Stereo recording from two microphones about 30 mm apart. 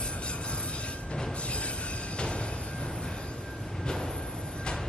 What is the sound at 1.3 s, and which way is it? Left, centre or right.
Music, left.